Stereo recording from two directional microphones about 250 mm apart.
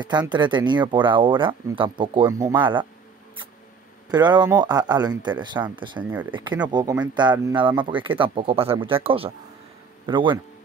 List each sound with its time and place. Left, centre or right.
0.3 s speech: centre
4.1 s speech: centre